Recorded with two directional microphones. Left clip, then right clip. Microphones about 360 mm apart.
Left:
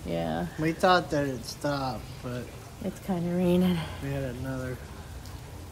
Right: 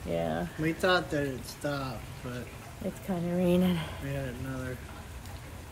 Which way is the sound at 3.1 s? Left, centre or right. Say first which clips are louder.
Left 1 dB; centre.